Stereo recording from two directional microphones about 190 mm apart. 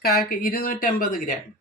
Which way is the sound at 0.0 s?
50° left (ahead or behind).